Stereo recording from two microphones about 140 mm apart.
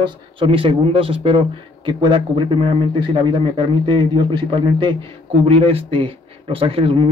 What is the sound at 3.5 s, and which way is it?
Speech, 35° right (ahead or behind).